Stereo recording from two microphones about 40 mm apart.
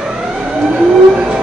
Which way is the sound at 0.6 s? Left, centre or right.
Right.